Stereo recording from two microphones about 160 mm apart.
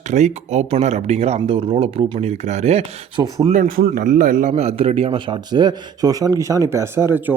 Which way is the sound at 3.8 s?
60° right (ahead or behind).